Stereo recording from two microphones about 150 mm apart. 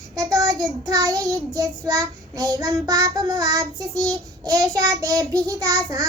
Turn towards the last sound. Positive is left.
turn(degrees=-20)  # may be behind; listen again after turning